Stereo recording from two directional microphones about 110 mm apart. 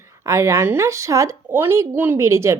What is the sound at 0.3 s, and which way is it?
A woman's voice, 25° right (ahead or behind).